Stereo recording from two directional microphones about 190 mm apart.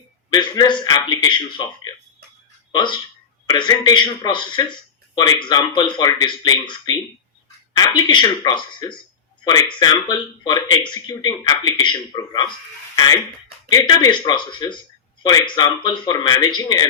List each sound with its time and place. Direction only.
0.3 s speech: 20° left (ahead or behind)
13.7 s speech: 20° left (ahead or behind)